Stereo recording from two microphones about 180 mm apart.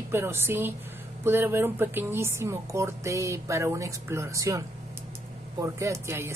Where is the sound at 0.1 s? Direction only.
15° right (ahead or behind).